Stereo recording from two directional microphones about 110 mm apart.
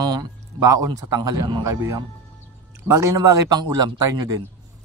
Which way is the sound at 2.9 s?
25° right (ahead or behind).